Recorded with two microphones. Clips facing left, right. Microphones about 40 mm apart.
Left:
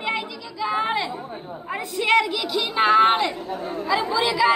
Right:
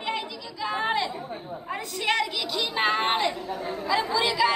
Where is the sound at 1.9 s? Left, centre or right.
Centre.